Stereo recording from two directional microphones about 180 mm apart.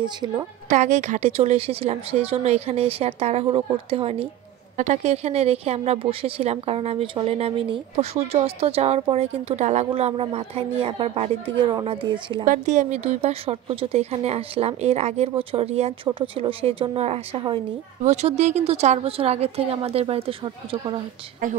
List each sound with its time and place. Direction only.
0.0 s a woman's voice: 25° right (ahead or behind)
0.7 s speech: 40° right (ahead or behind)
12.4 s speech: 40° right (ahead or behind)